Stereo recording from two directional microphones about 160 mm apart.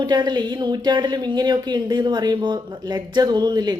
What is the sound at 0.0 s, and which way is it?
Speech, 25° right (ahead or behind).